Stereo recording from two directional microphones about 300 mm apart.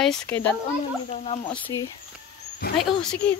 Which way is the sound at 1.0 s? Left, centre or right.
Left.